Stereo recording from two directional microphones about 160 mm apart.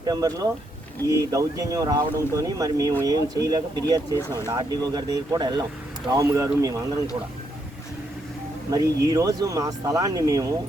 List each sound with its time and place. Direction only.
0.0 s speech: 25° right (ahead or behind)
9.0 s speech: 20° right (ahead or behind)